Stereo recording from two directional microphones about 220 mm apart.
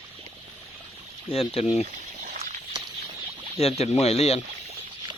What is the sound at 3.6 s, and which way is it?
Speech, 30° left (ahead or behind).